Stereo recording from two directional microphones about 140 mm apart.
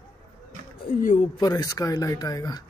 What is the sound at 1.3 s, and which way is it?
Speech, 25° left (ahead or behind).